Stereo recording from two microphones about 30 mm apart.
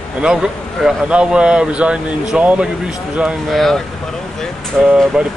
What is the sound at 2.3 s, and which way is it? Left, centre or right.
Speech, right.